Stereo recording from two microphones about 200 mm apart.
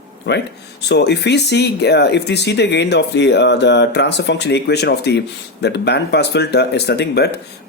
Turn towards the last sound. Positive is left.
turn(degrees=55)  # may be behind; listen again after turning